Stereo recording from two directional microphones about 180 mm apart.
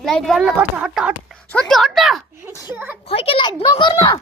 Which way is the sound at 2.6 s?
10° right (ahead or behind).